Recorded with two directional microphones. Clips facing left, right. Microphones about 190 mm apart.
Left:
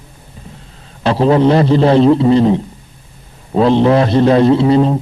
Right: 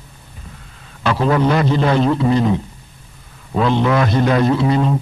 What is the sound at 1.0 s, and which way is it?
A man's voice, 30° left (ahead or behind).